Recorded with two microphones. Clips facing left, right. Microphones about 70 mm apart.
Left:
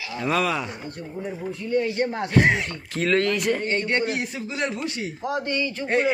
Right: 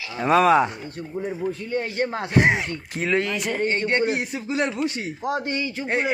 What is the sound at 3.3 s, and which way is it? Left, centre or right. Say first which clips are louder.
Speech: left 3 dB; centre.